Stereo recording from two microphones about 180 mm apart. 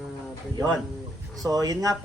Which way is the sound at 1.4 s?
20° right (ahead or behind).